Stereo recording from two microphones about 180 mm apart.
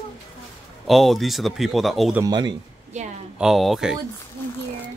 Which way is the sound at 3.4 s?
Centre (ahead or behind).